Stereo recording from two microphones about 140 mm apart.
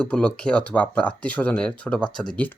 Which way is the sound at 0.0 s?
10° left (ahead or behind).